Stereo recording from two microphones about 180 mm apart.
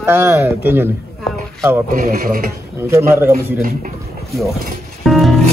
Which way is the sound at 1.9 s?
50° right (ahead or behind).